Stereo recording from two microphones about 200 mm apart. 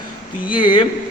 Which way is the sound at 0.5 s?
25° left (ahead or behind).